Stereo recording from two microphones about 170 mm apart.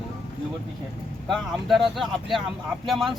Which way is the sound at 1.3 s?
Centre (ahead or behind).